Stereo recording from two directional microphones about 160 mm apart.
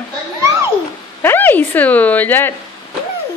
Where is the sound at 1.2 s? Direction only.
10° left (ahead or behind).